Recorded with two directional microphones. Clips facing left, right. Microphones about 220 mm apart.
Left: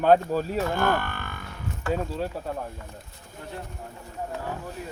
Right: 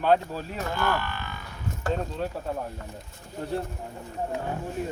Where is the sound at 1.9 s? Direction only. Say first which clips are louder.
Left 3 dB; 5° left (ahead or behind).